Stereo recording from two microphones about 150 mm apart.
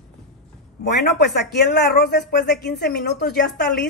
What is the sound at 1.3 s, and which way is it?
Speech, 90° left.